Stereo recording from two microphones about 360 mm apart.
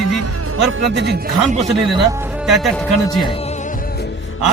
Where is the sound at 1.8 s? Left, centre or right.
Centre.